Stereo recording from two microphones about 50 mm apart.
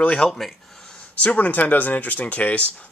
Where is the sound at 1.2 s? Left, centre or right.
Left.